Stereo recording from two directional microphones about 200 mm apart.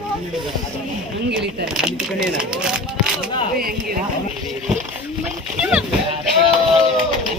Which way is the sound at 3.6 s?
50° right (ahead or behind).